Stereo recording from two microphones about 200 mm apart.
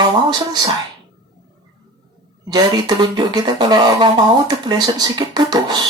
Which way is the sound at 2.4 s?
20° right (ahead or behind).